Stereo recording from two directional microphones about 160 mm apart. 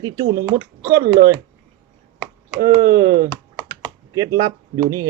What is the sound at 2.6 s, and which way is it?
Speech, 20° right (ahead or behind).